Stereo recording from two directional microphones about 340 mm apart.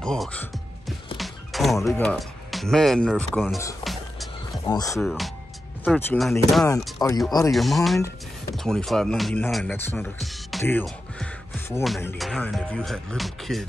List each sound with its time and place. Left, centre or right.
0.0 s music: centre
4.6 s speech: centre